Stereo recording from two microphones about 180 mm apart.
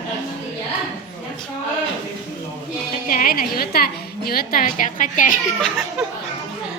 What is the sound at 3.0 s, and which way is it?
A woman's voice, 50° left (ahead or behind).